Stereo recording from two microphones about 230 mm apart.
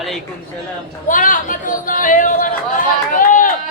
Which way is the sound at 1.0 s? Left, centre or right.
Left.